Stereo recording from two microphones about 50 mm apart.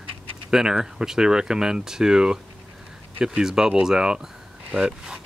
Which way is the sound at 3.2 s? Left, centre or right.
Centre.